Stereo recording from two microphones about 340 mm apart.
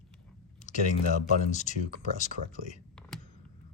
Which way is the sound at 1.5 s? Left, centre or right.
Left.